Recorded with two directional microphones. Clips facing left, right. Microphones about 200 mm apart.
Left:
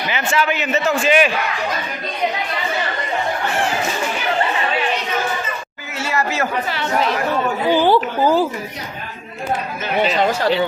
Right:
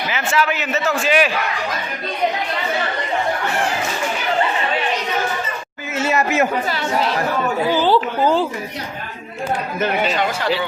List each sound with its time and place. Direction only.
0.1 s a man's voice: centre (ahead or behind)
5.9 s chatter: 20° right (ahead or behind)
7.7 s a woman's voice: 15° left (ahead or behind)